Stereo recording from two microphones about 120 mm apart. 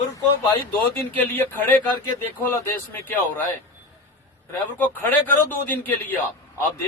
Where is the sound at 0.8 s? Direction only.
15° left (ahead or behind).